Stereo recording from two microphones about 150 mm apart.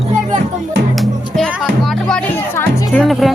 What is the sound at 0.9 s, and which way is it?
Music, centre (ahead or behind).